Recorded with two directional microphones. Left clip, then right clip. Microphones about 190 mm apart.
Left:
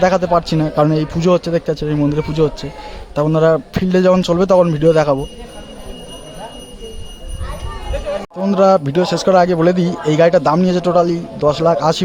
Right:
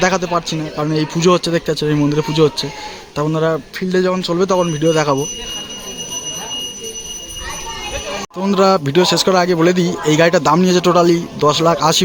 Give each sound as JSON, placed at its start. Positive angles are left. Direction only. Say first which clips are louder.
{"t": 0.0, "sound": "speech", "louder": "left 3 dB", "side_deg": 15}
{"t": 0.9, "sound": "speech", "louder": "right 1 dB", "side_deg": 15}
{"t": 3.2, "sound": "speech", "louder": "left 4 dB", "side_deg": 20}
{"t": 8.4, "sound": "speech", "louder": "left 1 dB", "side_deg": 10}